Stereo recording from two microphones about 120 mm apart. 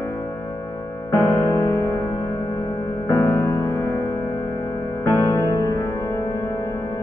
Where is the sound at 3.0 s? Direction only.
20° left (ahead or behind).